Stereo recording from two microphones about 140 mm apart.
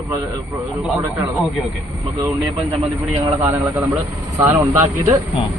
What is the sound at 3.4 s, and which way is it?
A man's voice, 20° right (ahead or behind).